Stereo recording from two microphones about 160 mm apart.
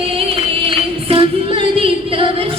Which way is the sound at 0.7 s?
35° right (ahead or behind).